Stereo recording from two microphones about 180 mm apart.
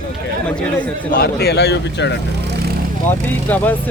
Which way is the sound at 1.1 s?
60° left (ahead or behind).